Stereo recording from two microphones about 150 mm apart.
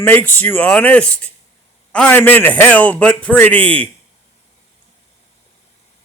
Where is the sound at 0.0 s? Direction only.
15° left (ahead or behind).